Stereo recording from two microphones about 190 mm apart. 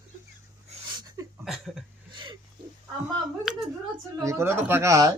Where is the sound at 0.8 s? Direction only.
20° right (ahead or behind).